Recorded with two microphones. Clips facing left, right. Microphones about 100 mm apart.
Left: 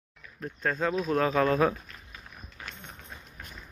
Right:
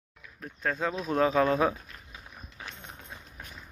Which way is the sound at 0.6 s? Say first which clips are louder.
Left 2 dB; 10° right (ahead or behind).